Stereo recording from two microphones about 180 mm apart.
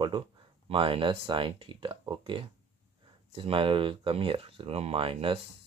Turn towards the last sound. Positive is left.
turn(degrees=-30)  # may be behind; listen again after turning